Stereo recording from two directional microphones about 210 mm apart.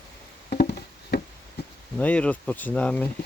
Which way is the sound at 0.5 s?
45° left (ahead or behind).